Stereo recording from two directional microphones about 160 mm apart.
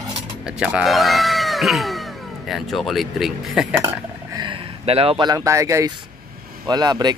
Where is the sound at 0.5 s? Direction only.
5° right (ahead or behind).